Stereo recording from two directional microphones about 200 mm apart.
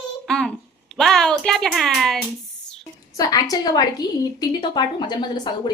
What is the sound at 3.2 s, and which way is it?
A woman's voice, 20° left (ahead or behind).